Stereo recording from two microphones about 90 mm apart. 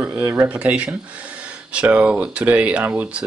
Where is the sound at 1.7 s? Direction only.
15° right (ahead or behind).